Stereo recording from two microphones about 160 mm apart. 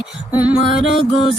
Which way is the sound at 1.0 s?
35° left (ahead or behind).